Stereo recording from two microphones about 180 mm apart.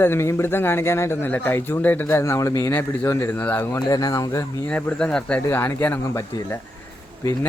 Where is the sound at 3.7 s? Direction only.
20° left (ahead or behind).